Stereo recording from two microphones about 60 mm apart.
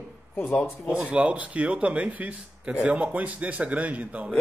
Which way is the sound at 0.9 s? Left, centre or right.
Centre.